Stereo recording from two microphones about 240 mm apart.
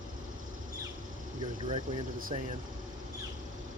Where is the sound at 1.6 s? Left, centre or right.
Right.